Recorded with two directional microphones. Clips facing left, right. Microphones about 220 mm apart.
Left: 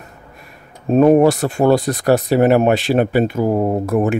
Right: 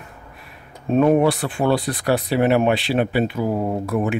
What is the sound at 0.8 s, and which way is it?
Speech, 40° left (ahead or behind).